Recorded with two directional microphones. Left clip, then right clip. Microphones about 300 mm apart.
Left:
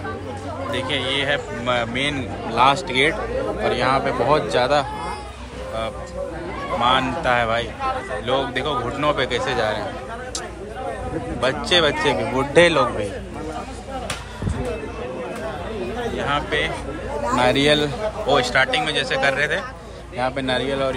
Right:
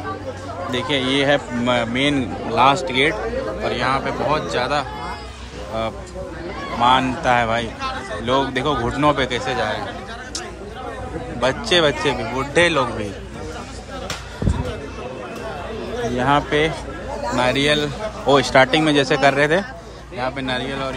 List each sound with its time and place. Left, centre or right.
0.7 s speech: centre
6.8 s speech: centre
11.4 s speech: centre
16.2 s a man's voice: right
16.4 s speech: right
17.4 s a man's voice: centre
20.2 s speech: centre